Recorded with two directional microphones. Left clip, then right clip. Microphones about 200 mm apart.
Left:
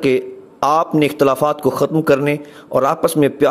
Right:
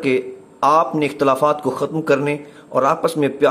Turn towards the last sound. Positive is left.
turn(degrees=30)  # may be behind; listen again after turning